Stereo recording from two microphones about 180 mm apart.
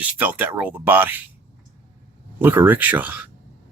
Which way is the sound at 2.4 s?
10° right (ahead or behind).